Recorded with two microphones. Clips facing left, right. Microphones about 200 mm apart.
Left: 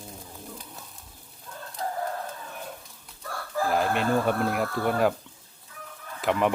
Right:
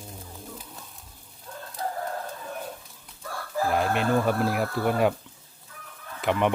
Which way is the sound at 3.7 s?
Centre (ahead or behind).